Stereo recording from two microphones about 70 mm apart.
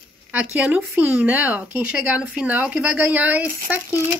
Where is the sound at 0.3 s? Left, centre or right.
Right.